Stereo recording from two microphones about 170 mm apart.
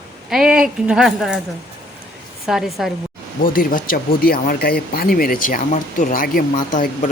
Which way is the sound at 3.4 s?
55° left (ahead or behind).